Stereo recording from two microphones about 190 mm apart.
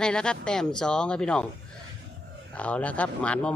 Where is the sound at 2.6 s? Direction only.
5° left (ahead or behind).